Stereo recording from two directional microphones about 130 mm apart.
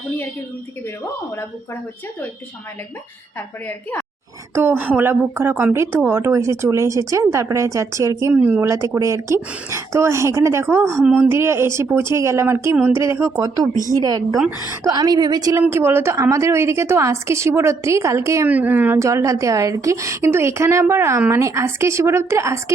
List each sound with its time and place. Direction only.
4.5 s speech: 15° right (ahead or behind)
8.3 s speech: 10° right (ahead or behind)
9.0 s speech: 25° right (ahead or behind)
15.6 s speech: 20° right (ahead or behind)
18.4 s speech: 10° right (ahead or behind)